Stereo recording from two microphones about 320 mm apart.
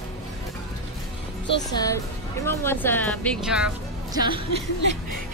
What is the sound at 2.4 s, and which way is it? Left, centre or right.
Speech, centre.